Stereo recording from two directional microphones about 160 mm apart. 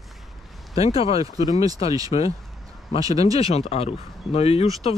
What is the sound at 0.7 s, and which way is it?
Speech, 35° left (ahead or behind).